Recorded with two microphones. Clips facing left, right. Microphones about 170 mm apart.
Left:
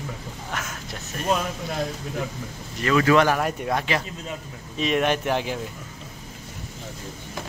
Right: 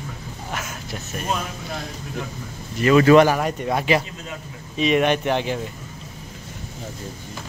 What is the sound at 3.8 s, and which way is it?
Speech, 15° right (ahead or behind).